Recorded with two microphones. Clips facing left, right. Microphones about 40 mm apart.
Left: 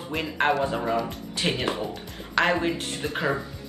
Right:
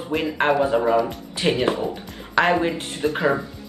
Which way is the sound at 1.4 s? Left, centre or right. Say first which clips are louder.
Right 6 dB; centre.